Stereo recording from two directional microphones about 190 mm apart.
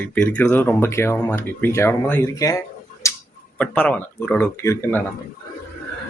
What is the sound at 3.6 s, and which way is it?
Speech, 10° left (ahead or behind).